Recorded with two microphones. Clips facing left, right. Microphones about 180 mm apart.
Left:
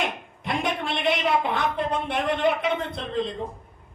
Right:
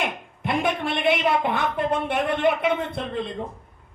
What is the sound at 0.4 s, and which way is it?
Speech, 50° right (ahead or behind).